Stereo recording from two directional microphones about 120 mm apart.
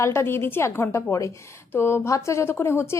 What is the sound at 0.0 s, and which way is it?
A woman's voice, 20° left (ahead or behind).